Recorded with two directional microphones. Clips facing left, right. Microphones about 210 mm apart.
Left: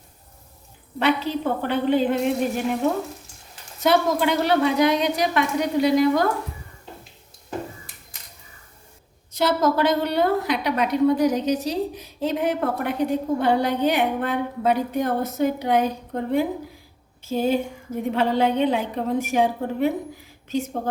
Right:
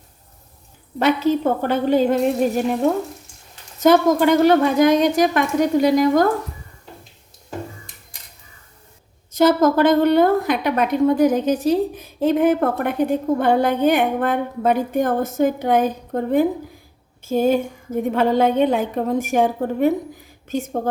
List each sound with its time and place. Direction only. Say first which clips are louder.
0.9 s a woman's voice: right 5 dB; 45° right (ahead or behind)
3.8 s a woman's voice: right 6 dB; 45° right (ahead or behind)
9.3 s a woman's voice: right 6 dB; 50° right (ahead or behind)